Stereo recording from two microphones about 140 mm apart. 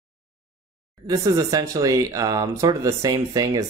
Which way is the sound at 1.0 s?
25° right (ahead or behind).